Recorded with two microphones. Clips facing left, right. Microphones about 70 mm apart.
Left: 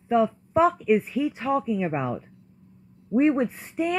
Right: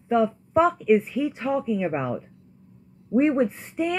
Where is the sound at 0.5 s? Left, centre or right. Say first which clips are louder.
Right 1 dB; centre.